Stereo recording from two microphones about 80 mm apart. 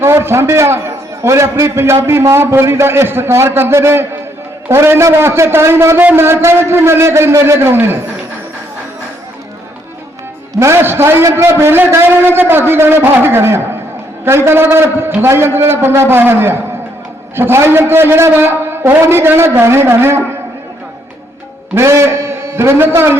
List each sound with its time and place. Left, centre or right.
0.0 s a man's voice: right
10.6 s a man's voice: right
21.8 s a man's voice: right